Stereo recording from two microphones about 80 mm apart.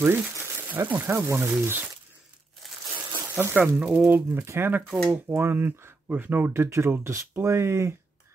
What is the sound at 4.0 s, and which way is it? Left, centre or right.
Speech, right.